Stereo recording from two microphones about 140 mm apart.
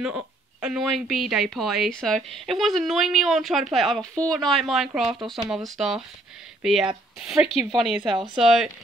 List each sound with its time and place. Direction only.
0.0 s a woman's voice: 5° right (ahead or behind)
8.0 s speech: 35° right (ahead or behind)
8.4 s a woman's voice: 5° right (ahead or behind)